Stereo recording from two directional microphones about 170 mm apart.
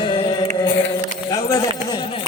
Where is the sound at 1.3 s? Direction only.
20° left (ahead or behind).